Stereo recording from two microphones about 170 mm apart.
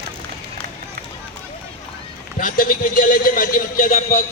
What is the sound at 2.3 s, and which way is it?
A man's voice, 55° left (ahead or behind).